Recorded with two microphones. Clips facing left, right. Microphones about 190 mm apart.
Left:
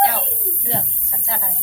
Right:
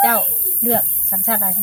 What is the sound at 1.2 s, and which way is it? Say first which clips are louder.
Speech: right 7 dB; 60° right (ahead or behind).